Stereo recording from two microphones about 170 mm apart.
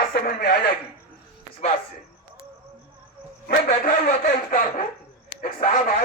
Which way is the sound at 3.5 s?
60° left (ahead or behind).